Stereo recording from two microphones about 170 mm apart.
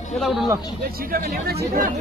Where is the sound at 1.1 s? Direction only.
60° right (ahead or behind).